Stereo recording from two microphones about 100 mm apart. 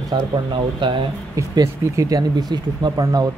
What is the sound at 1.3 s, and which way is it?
Speech, 35° right (ahead or behind).